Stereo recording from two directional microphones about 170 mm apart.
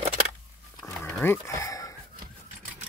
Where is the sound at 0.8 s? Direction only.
15° left (ahead or behind).